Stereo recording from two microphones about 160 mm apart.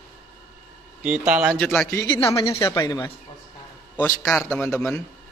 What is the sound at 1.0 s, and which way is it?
Speech, 5° right (ahead or behind).